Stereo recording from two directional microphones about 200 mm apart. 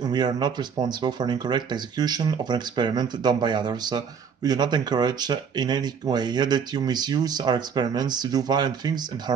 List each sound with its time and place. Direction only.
0.0 s speech: 20° right (ahead or behind)